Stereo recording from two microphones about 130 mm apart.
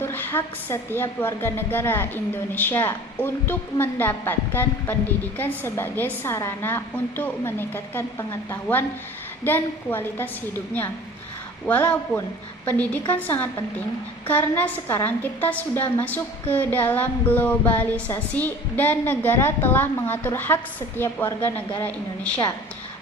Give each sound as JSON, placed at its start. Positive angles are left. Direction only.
{"t": 0.0, "sound": "a woman's voice", "side_deg": 15}
{"t": 11.6, "sound": "a woman's voice", "side_deg": 10}